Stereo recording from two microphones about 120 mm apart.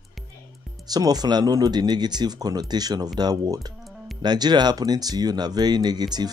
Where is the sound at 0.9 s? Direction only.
35° right (ahead or behind).